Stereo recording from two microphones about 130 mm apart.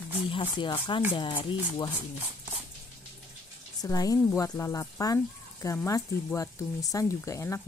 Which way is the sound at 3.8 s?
25° left (ahead or behind).